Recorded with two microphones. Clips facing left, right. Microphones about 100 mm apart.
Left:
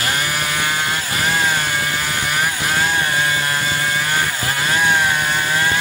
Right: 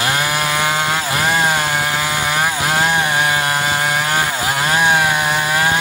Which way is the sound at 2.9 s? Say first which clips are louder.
Right 3 dB; 85° right.